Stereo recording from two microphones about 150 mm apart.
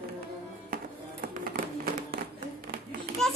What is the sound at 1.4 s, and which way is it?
Music, 70° right (ahead or behind).